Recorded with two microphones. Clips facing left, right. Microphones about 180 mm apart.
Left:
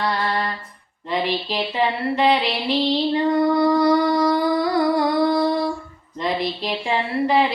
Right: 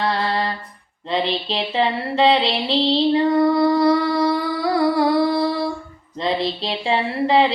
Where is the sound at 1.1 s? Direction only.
25° right (ahead or behind).